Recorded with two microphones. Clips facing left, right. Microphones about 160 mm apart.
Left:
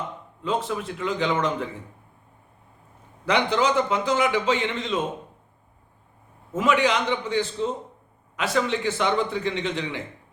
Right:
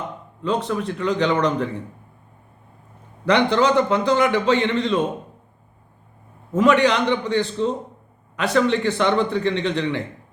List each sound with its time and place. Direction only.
0.4 s a man's voice: 5° left (ahead or behind)
3.2 s a man's voice: 5° left (ahead or behind)
6.5 s a man's voice: 5° left (ahead or behind)